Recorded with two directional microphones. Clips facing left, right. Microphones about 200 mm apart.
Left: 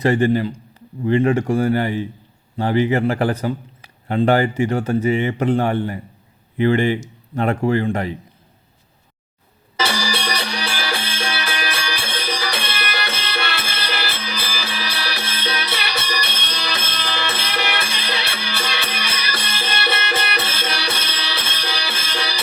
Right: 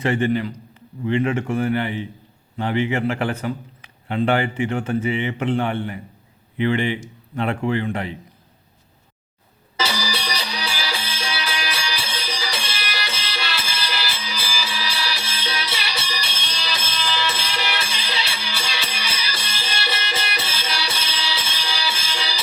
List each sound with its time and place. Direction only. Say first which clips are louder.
0.0 s a man's voice: left 4 dB; 40° left (ahead or behind)
9.7 s music: left 3 dB; 55° left (ahead or behind)